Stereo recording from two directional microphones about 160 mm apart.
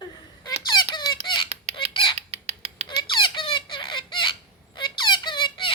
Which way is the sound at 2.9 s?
30° left (ahead or behind).